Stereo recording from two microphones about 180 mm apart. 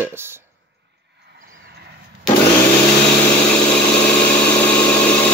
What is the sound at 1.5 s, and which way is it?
Vehicle, 60° right (ahead or behind).